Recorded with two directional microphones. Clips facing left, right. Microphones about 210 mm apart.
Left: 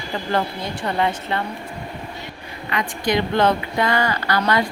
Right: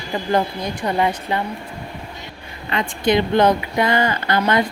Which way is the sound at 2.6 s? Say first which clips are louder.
Right 4 dB; 25° right (ahead or behind).